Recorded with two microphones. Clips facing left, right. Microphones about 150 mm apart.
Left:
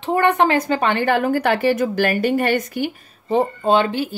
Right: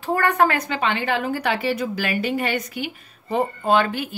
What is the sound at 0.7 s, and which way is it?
A woman's voice, 50° left (ahead or behind).